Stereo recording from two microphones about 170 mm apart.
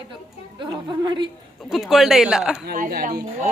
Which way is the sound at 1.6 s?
Centre (ahead or behind).